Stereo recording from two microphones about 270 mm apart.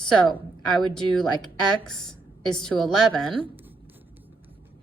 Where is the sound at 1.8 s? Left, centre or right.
Centre.